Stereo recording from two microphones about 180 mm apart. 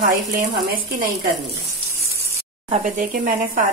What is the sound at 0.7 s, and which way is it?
Speech, 50° right (ahead or behind).